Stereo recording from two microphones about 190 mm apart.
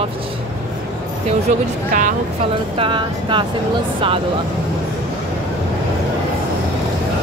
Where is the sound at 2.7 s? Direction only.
25° right (ahead or behind).